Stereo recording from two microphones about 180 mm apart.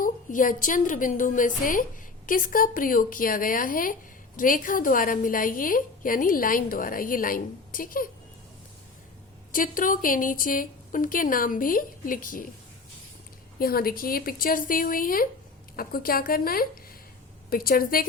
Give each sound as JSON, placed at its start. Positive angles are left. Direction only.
{"t": 0.0, "sound": "a woman's voice", "side_deg": 50}
{"t": 9.5, "sound": "a woman's voice", "side_deg": 50}
{"t": 13.6, "sound": "a woman's voice", "side_deg": 55}